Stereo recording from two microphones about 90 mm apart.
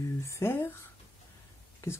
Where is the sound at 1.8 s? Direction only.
35° left (ahead or behind).